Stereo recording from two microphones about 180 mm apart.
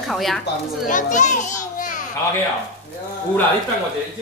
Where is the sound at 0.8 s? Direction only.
45° left (ahead or behind).